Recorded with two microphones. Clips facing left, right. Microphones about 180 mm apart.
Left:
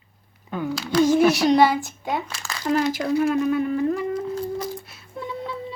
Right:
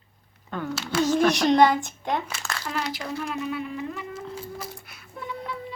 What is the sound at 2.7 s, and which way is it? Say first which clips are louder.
Speech: left 10 dB; 45° left (ahead or behind).